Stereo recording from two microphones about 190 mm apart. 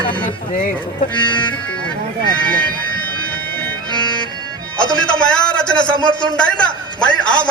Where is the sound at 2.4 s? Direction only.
5° left (ahead or behind).